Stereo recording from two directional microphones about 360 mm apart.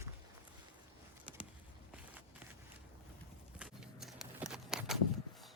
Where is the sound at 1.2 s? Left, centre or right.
Centre.